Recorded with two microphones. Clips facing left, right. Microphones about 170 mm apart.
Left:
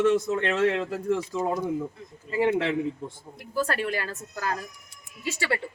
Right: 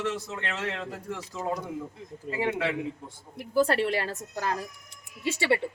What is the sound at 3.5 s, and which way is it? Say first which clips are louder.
A woman's voice: right 3 dB; 25° right (ahead or behind).